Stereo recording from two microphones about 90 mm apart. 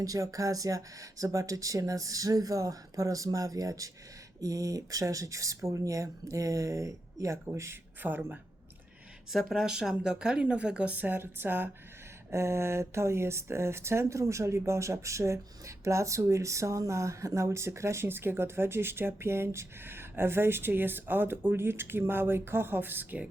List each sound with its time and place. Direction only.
0.0 s speech: 40° right (ahead or behind)
8.0 s speech: 20° right (ahead or behind)
9.3 s a woman's voice: centre (ahead or behind); by 23.3 s 20° right (ahead or behind)